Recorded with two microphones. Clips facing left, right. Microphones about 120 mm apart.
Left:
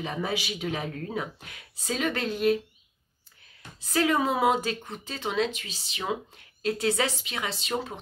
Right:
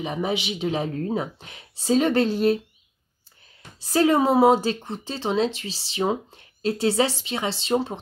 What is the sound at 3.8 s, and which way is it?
Speech, 30° right (ahead or behind).